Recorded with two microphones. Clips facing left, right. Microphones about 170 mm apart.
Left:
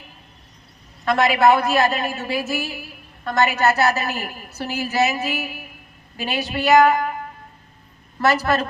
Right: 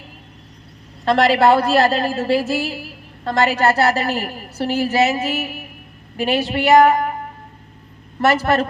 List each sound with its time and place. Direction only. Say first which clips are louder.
1.0 s a woman's voice: right 2 dB; 30° right (ahead or behind)
8.2 s a woman's voice: right 3 dB; 25° right (ahead or behind)